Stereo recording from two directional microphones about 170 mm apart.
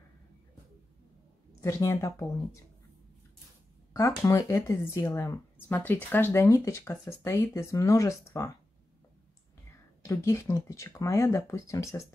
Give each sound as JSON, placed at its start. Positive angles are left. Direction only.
{"t": 1.6, "sound": "speech", "side_deg": 15}
{"t": 3.9, "sound": "speech", "side_deg": 15}
{"t": 9.7, "sound": "speech", "side_deg": 15}